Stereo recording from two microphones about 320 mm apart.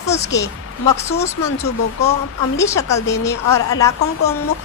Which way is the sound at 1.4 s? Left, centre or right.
Left.